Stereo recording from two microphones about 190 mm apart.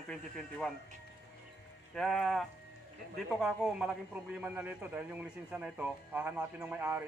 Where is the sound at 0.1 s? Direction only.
5° left (ahead or behind).